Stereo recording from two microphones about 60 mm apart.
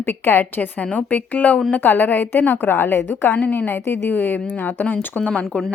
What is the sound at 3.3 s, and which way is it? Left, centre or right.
A woman's voice, left.